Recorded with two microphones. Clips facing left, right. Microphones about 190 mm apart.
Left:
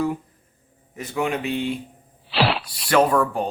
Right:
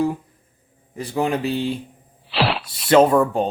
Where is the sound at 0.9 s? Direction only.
35° right (ahead or behind).